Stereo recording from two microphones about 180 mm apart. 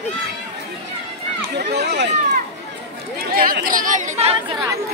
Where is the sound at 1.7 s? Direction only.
70° right (ahead or behind).